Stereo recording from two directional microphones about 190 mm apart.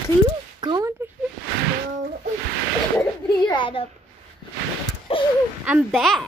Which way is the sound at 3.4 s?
25° left (ahead or behind).